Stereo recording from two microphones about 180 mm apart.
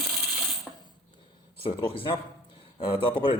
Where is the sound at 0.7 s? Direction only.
Centre (ahead or behind).